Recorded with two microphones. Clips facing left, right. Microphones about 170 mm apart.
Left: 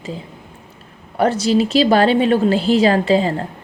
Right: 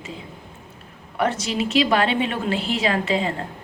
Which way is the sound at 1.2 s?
35° left (ahead or behind).